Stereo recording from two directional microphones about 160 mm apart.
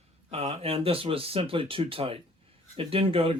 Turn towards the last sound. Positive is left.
turn(degrees=-35)  # may be behind; listen again after turning